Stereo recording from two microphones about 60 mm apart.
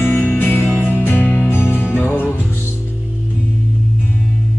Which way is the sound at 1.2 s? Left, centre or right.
Left.